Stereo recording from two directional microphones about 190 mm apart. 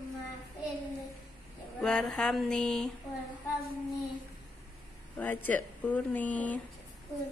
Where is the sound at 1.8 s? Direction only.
5° left (ahead or behind).